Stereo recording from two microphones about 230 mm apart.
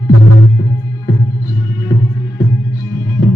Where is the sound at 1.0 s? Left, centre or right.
Centre.